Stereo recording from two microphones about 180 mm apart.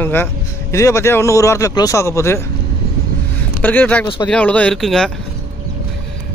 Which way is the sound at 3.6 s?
10° left (ahead or behind).